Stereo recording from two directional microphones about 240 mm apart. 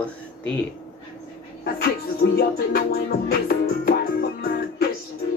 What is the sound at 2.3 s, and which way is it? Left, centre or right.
Music, left.